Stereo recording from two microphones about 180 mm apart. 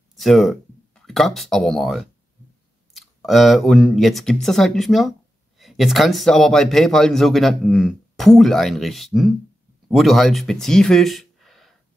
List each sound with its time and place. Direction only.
0.1 s speech: centre (ahead or behind)